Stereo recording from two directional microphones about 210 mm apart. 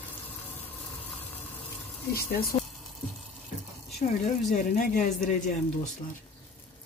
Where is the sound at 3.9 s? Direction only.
35° left (ahead or behind).